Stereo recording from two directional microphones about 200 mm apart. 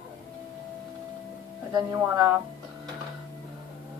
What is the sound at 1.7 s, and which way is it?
Speech, 20° right (ahead or behind).